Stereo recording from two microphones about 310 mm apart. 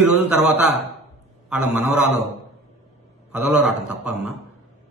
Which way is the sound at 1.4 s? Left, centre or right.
Centre.